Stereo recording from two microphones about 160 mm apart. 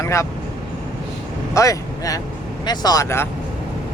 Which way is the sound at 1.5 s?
20° left (ahead or behind).